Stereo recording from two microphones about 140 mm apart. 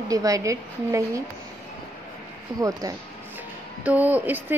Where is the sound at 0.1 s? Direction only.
25° right (ahead or behind).